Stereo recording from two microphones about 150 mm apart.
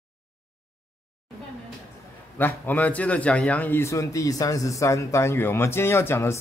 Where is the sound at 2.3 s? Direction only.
10° left (ahead or behind).